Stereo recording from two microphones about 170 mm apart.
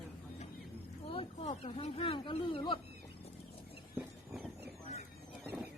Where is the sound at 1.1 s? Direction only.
35° left (ahead or behind).